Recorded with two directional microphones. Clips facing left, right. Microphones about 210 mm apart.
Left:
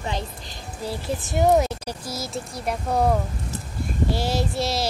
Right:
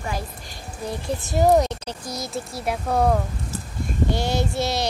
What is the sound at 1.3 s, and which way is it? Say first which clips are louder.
Speech: right 1 dB; centre (ahead or behind).